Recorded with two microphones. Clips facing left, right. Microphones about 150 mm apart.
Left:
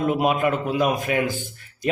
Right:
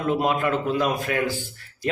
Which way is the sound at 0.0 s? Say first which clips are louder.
Left 2 dB; 15° left (ahead or behind).